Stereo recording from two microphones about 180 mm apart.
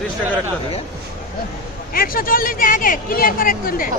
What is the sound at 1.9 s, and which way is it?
Speech, 55° left (ahead or behind).